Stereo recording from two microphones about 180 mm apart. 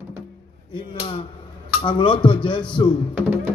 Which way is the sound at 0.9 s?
30° left (ahead or behind).